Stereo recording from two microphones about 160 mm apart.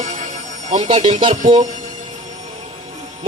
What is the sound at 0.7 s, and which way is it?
Speech, 30° right (ahead or behind).